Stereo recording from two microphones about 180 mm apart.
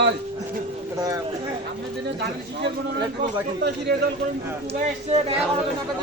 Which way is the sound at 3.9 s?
65° right (ahead or behind).